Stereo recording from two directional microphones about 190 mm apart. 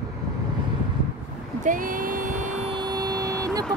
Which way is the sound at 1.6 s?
45° right (ahead or behind).